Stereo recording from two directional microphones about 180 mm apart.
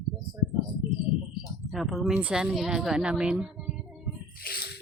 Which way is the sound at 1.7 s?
Centre (ahead or behind).